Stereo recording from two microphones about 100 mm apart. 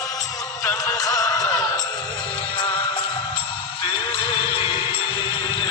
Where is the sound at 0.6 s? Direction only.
30° left (ahead or behind).